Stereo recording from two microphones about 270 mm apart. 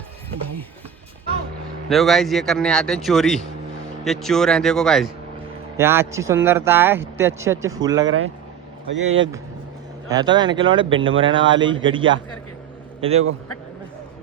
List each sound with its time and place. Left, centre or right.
1.9 s a man's voice: centre
5.7 s a man's voice: centre
8.0 s speech: right
10.1 s a man's voice: centre